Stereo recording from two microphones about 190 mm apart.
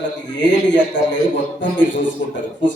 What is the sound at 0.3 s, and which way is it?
Speech, 70° left (ahead or behind).